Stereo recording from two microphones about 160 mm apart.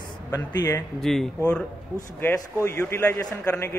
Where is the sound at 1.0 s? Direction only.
Centre (ahead or behind).